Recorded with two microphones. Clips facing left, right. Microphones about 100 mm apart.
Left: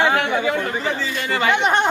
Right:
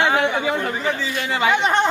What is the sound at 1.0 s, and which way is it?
Speech, 10° right (ahead or behind).